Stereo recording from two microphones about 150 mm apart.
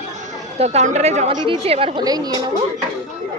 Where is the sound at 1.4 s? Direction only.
40° right (ahead or behind).